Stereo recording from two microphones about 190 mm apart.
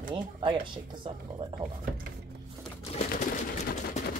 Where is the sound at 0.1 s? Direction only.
25° right (ahead or behind).